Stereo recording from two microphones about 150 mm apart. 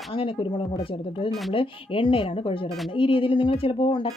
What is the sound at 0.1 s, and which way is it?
Speech, 35° left (ahead or behind).